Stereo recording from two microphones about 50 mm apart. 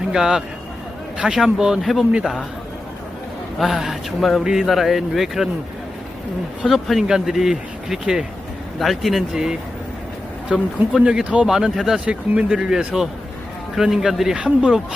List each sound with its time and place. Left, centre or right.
0.1 s speech: centre
1.8 s speech: centre
3.6 s speech: centre
6.7 s speech: centre
8.8 s speech: centre
9.3 s speech: centre
11.4 s speech: centre
11.9 s speech: right
14.3 s speech: right